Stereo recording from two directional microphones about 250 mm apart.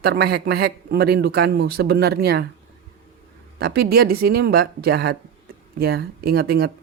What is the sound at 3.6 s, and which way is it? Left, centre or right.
Speech, right.